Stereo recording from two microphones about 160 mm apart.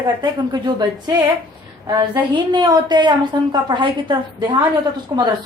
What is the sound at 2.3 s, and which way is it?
Speech, 25° right (ahead or behind).